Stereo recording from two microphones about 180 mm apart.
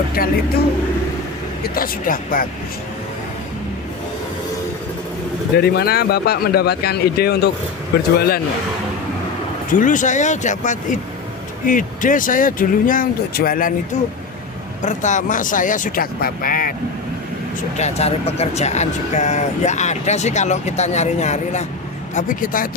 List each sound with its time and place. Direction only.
0.2 s speech: 55° left (ahead or behind)
1.6 s speech: 55° left (ahead or behind)
5.5 s speech: 60° left (ahead or behind)
9.8 s speech: 45° left (ahead or behind)
14.8 s speech: 45° left (ahead or behind)
17.7 s speech: 35° left (ahead or behind)